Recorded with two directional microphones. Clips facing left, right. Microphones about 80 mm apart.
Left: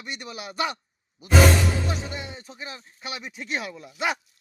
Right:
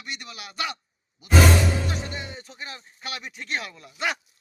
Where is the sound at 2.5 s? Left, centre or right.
Centre.